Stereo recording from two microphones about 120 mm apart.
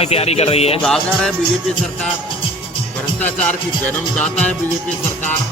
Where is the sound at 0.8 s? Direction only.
5° left (ahead or behind).